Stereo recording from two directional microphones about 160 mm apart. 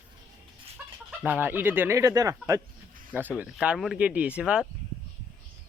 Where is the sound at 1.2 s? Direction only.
10° right (ahead or behind).